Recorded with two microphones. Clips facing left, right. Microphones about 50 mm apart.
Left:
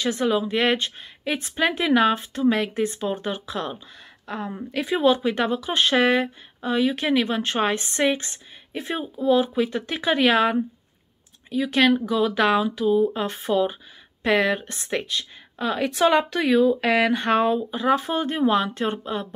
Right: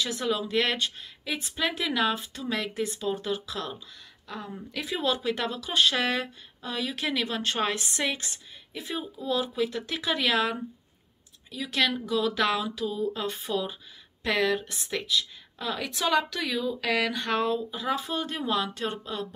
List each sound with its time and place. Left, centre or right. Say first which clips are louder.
0.1 s speech: left 5 dB; left
4.7 s speech: left 9 dB; left
14.7 s speech: left 3 dB; left